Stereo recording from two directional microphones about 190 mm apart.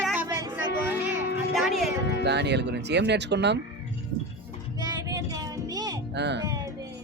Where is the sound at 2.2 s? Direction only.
65° right (ahead or behind).